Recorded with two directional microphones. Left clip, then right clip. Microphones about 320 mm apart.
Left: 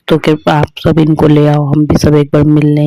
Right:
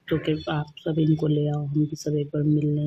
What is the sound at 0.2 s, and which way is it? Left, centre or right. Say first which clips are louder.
Speech: left 18 dB; left.